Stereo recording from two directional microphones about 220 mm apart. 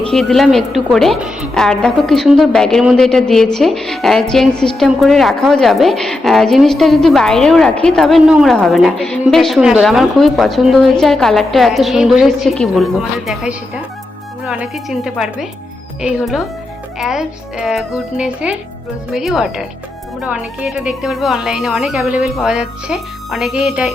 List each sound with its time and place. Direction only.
0.1 s a woman's voice: centre (ahead or behind)